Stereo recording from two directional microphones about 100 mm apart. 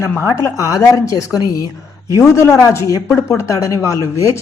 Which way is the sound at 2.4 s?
25° left (ahead or behind).